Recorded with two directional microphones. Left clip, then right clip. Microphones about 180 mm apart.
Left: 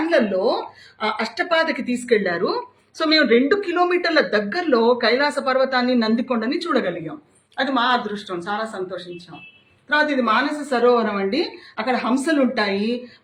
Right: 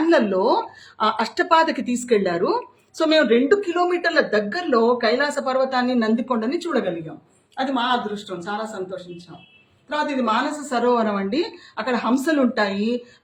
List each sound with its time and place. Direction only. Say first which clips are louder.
0.0 s speech: right 1 dB; 75° right (ahead or behind); by 6.9 s 35° right (ahead or behind)
7.5 s speech: left 2 dB; 20° right (ahead or behind)
10.6 s a woman's voice: left 3 dB; 45° right (ahead or behind); by 13.0 s 65° right (ahead or behind)